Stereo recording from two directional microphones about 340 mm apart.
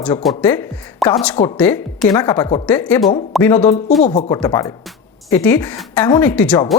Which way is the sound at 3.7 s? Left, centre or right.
Left.